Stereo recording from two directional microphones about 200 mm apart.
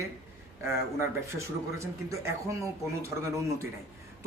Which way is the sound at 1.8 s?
15° right (ahead or behind).